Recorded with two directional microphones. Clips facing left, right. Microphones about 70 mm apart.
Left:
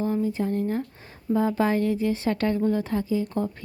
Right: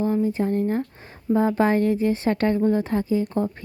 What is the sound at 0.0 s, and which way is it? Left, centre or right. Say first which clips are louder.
A woman's voice: right 3 dB; right.